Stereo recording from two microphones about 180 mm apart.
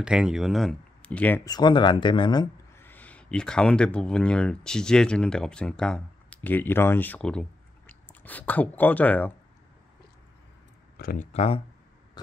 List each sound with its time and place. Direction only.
0.0 s speech: 5° right (ahead or behind)
1.5 s speech: 25° left (ahead or behind)
2.7 s speech: 10° left (ahead or behind)
11.0 s speech: 55° left (ahead or behind)
11.3 s speech: 35° left (ahead or behind)